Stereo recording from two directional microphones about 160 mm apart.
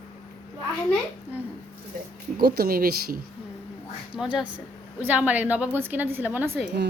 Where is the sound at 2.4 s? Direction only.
70° right (ahead or behind).